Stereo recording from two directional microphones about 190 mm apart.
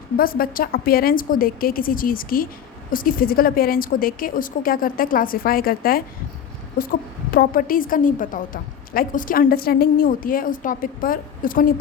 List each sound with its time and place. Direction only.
0.2 s a woman's voice: 50° left (ahead or behind)
7.3 s a woman's voice: 45° left (ahead or behind)